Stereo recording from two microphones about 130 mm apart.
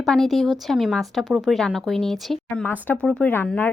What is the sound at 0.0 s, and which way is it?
Speech, centre (ahead or behind).